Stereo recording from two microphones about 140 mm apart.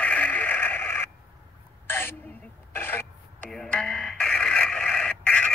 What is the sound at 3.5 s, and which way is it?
Radio, 5° left (ahead or behind).